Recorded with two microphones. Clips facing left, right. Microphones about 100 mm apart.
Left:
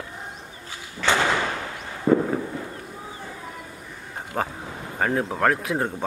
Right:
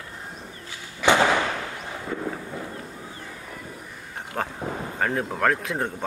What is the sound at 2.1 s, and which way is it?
Fireworks, 45° left (ahead or behind).